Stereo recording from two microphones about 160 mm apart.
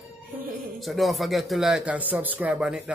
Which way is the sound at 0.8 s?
Centre (ahead or behind).